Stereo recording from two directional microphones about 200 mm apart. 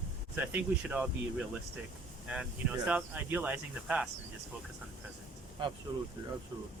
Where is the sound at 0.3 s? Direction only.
10° right (ahead or behind).